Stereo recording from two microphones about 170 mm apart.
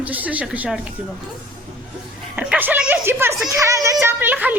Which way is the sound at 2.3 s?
5° right (ahead or behind).